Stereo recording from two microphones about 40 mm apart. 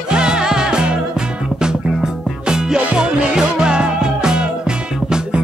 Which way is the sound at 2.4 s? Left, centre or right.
Centre.